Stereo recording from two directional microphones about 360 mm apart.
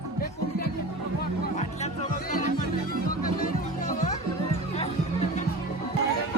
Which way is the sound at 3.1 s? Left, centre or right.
Left.